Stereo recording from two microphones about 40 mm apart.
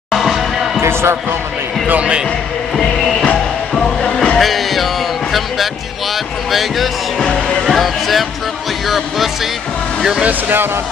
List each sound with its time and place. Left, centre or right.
0.1 s music: centre
0.7 s basketball bounce: right
2.7 s music: centre
3.7 s music: centre
4.4 s music: centre
6.5 s speech: centre
7.6 s a sound: centre
8.8 s music: centre